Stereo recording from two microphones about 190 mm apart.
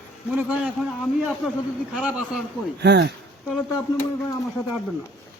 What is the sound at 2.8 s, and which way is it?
Speech, 60° right (ahead or behind).